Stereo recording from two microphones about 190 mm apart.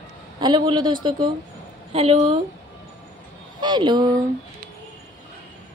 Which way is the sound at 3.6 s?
25° right (ahead or behind).